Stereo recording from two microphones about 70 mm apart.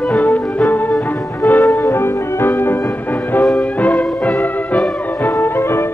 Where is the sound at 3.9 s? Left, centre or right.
Left.